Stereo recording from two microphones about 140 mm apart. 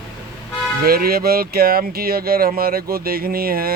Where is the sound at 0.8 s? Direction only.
90° right.